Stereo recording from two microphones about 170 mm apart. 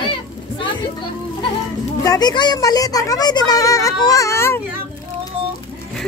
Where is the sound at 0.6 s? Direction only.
30° left (ahead or behind).